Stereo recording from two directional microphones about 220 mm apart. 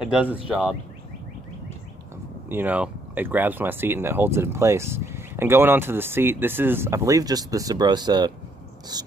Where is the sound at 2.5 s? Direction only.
5° right (ahead or behind).